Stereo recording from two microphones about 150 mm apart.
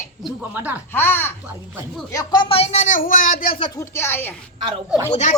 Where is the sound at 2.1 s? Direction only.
25° left (ahead or behind); by 3.4 s 70° left (ahead or behind).